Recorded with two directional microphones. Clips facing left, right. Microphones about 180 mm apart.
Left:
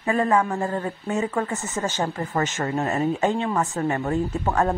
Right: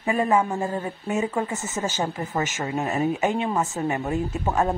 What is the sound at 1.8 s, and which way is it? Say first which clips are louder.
A woman's voice: left 1 dB; 10° right (ahead or behind).